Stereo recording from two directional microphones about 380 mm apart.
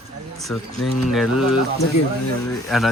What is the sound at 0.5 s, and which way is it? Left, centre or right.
Speech, centre.